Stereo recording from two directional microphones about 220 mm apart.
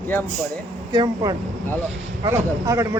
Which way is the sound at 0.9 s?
20° right (ahead or behind).